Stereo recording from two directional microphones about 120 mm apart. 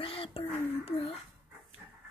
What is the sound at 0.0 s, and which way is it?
Whispering, 50° left (ahead or behind).